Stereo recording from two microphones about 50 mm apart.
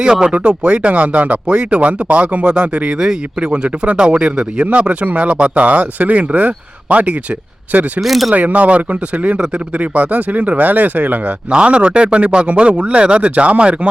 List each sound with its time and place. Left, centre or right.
0.0 s speech: centre
0.3 s speech: right
8.0 s speech: centre
8.3 s speech: right
11.5 s speech: right